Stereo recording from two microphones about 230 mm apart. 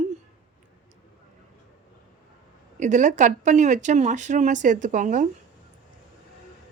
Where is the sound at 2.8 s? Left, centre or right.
Right.